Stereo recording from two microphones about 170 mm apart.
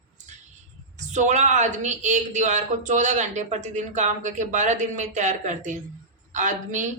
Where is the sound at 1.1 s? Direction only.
45° right (ahead or behind).